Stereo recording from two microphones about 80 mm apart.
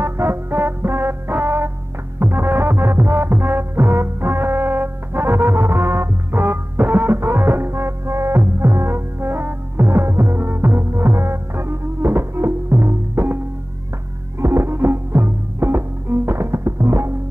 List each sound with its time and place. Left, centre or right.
0.0 s music: right
14.4 s music: right